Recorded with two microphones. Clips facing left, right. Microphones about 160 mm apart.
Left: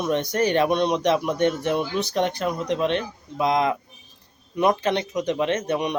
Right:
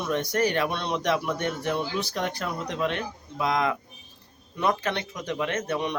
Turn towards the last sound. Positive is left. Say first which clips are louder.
# left 4 dB
turn(degrees=20)  # may be behind; listen again after turning